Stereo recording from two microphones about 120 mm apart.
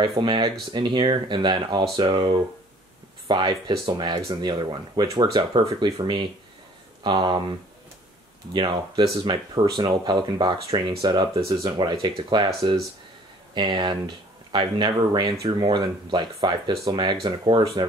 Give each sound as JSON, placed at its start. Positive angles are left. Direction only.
{"t": 0.0, "sound": "speech", "side_deg": -40}
{"t": 8.5, "sound": "speech", "side_deg": -40}
{"t": 13.6, "sound": "speech", "side_deg": -40}